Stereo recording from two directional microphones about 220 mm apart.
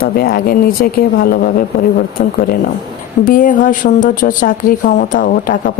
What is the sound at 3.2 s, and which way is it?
Speech, 40° left (ahead or behind).